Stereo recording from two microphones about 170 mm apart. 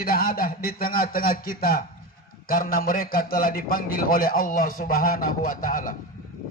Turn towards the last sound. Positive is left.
turn(degrees=55)  # may be behind; listen again after turning